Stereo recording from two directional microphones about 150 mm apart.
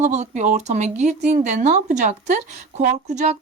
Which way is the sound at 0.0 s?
50° right (ahead or behind).